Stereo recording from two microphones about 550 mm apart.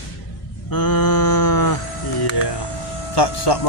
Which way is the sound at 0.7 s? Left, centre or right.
Left.